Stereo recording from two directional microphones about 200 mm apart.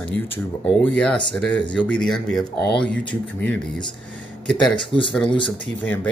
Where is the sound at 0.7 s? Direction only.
5° left (ahead or behind).